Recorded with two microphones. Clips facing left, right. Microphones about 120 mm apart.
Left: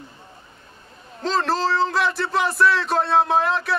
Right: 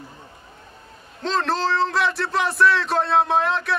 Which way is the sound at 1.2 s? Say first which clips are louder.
Left 1 dB; centre (ahead or behind).